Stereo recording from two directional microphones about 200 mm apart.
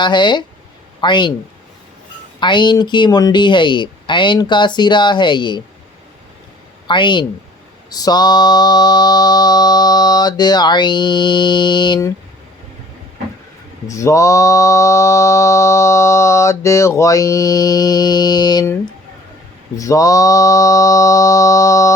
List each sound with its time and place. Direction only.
0.0 s mantra: 20° left (ahead or behind)
2.4 s mantra: 25° left (ahead or behind)
6.8 s speech: 25° left (ahead or behind)
7.9 s mantra: 20° left (ahead or behind)
13.8 s mantra: 15° left (ahead or behind)